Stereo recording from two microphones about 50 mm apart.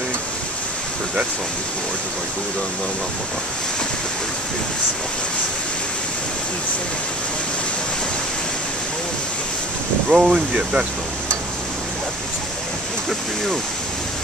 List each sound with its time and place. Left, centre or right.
10.0 s speech: centre